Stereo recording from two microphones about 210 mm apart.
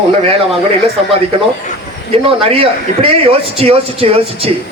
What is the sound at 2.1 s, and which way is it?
Speech, 25° right (ahead or behind).